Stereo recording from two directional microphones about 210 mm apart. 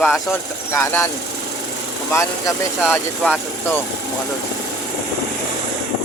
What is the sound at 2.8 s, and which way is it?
Speech, 5° left (ahead or behind).